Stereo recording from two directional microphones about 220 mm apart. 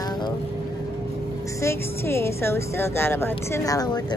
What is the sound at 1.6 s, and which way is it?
A woman's voice, 10° left (ahead or behind).